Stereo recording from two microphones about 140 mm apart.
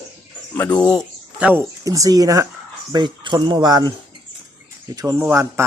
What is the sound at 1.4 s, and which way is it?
Speech, 10° right (ahead or behind).